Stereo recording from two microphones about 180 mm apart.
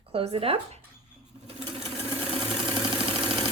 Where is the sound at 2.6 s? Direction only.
30° right (ahead or behind).